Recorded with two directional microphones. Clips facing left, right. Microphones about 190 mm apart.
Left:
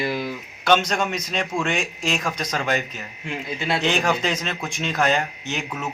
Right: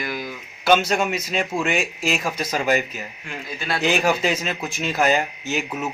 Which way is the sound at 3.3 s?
20° left (ahead or behind).